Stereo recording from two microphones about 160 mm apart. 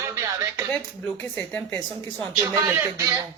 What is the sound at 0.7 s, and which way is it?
Speech, 10° left (ahead or behind).